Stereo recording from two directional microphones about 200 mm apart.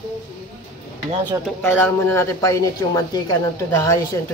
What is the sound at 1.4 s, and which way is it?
Speech, 5° left (ahead or behind).